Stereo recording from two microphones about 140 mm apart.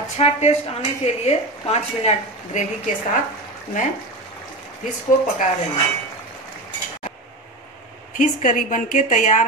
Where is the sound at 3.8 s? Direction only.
70° left (ahead or behind).